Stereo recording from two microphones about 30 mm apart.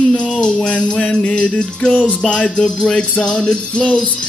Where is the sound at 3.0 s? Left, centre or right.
Left.